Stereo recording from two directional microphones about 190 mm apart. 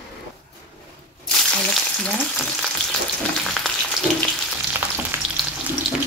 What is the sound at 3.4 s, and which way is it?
Frying, centre (ahead or behind).